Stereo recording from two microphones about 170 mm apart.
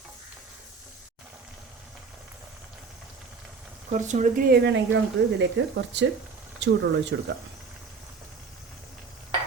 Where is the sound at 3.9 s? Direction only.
45° right (ahead or behind).